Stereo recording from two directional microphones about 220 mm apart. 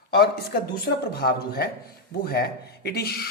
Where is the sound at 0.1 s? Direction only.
45° left (ahead or behind).